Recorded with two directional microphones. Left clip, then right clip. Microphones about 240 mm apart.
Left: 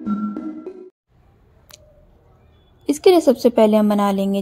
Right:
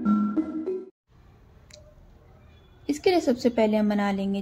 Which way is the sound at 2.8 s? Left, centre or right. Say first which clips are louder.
Left 9 dB; left.